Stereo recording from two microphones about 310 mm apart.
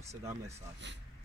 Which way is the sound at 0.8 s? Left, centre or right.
Right.